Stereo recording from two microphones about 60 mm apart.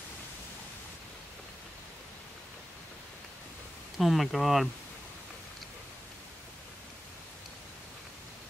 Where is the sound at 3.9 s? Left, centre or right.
Centre.